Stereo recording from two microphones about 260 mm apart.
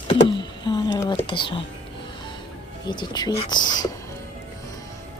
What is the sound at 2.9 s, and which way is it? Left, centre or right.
Speech, centre.